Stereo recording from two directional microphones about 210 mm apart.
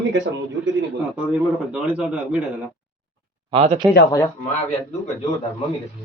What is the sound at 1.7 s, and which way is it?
Speech, 5° right (ahead or behind).